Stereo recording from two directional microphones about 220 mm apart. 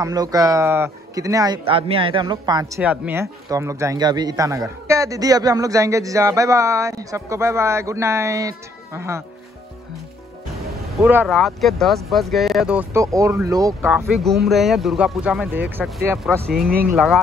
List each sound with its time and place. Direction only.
0.0 s speech: 15° right (ahead or behind)
2.8 s speech: 10° right (ahead or behind)
11.0 s speech: 10° right (ahead or behind)
13.8 s speech: centre (ahead or behind)
16.6 s speech: 45° right (ahead or behind)
16.9 s speech: centre (ahead or behind)